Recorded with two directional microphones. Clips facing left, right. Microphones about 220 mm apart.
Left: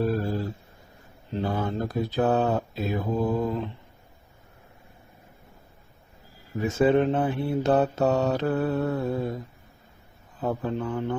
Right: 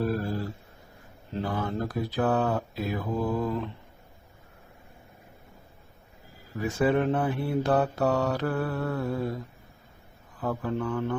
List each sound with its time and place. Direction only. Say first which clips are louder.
0.0 s a sound: left 3 dB; 25° left (ahead or behind)
1.3 s mantra: left 3 dB; 25° left (ahead or behind)
6.5 s mantra: left 4 dB; 20° left (ahead or behind)